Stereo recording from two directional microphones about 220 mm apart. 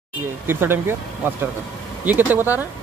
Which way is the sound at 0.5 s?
10° right (ahead or behind).